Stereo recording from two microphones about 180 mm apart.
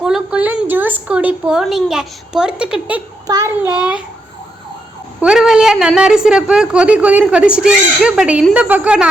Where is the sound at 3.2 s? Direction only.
20° right (ahead or behind).